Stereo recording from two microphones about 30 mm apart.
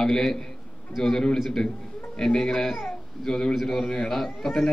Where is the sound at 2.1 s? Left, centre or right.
Centre.